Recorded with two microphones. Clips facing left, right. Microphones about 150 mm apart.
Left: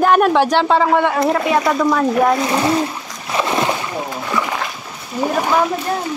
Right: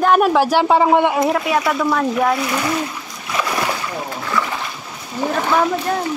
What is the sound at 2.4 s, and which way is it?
Speech, 30° left (ahead or behind).